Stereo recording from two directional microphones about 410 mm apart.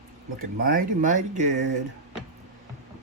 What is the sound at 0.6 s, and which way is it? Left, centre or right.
Speech, right.